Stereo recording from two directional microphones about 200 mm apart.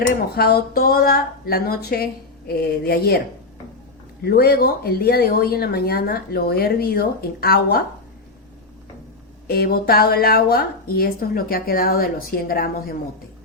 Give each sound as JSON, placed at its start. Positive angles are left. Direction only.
{"t": 0.3, "sound": "speech", "side_deg": 50}
{"t": 4.2, "sound": "speech", "side_deg": 50}
{"t": 9.5, "sound": "speech", "side_deg": 50}